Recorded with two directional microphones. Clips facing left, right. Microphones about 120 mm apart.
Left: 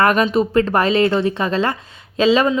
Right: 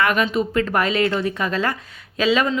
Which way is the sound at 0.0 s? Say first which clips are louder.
Left 4 dB; 40° left (ahead or behind).